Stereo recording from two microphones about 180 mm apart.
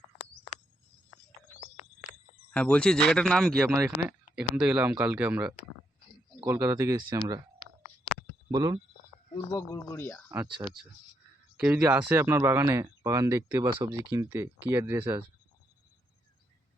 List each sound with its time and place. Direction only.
1.7 s a sound: 35° left (ahead or behind)
2.5 s speech: 5° left (ahead or behind); by 7.4 s 20° right (ahead or behind)
8.4 s speech: 20° right (ahead or behind)
9.3 s speech: 25° left (ahead or behind)
9.7 s speech: 15° left (ahead or behind)
10.3 s speech: 15° right (ahead or behind)